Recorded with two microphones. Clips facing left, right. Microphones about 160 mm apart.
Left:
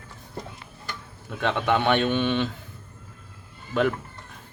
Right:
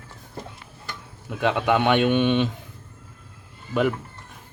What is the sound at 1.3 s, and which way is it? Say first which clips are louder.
A man's voice: right 2 dB; 10° right (ahead or behind).